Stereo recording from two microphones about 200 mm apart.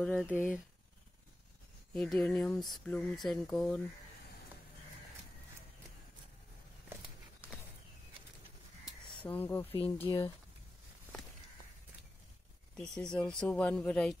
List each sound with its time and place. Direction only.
0.0 s speech: centre (ahead or behind)
2.0 s speech: 5° left (ahead or behind)
9.2 s speech: 10° left (ahead or behind)
10.0 s speech: 25° left (ahead or behind)
12.7 s speech: 5° left (ahead or behind)